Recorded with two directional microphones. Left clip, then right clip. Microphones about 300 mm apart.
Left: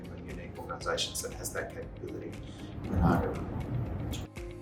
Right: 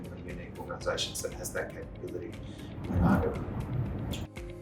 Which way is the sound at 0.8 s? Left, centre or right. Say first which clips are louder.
Even; centre.